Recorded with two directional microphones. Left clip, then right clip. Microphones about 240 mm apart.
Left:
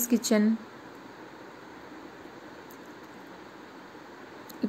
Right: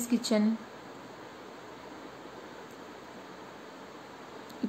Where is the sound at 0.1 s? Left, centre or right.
Centre.